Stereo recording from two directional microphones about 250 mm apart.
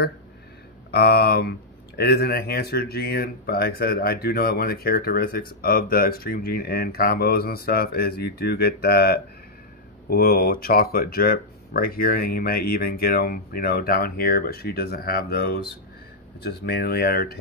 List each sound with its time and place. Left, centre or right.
0.9 s speech: left